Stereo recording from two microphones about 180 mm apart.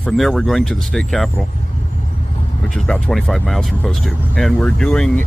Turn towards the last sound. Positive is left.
turn(degrees=5)  # may be behind; listen again after turning